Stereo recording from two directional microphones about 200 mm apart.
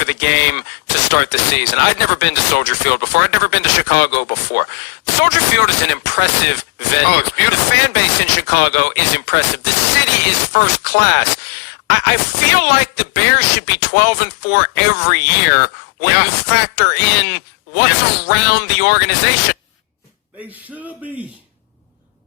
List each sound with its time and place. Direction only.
0.0 s speech: 55° left (ahead or behind)
10.5 s speech: 55° left (ahead or behind)